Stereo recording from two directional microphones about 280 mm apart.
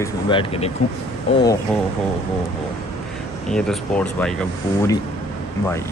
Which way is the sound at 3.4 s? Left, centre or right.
Centre.